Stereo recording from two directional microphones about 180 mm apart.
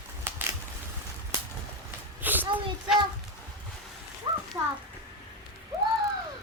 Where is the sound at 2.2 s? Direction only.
10° right (ahead or behind).